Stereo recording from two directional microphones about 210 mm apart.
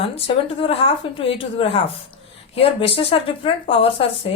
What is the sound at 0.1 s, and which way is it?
Speech, 25° left (ahead or behind).